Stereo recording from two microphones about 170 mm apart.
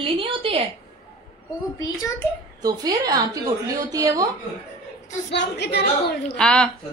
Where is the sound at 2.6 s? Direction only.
20° right (ahead or behind).